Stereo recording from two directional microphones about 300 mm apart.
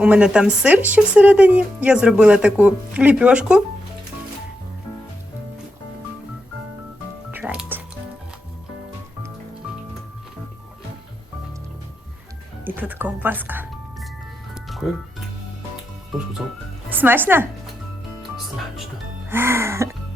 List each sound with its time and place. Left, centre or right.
0.0 s a woman's voice: centre
7.3 s music: centre
12.6 s music: centre
16.9 s a woman's voice: centre
19.3 s music: centre